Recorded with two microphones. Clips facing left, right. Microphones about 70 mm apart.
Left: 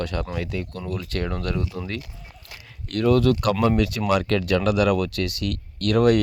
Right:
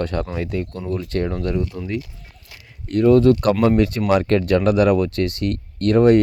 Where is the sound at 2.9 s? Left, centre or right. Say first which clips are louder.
Right 6 dB; right.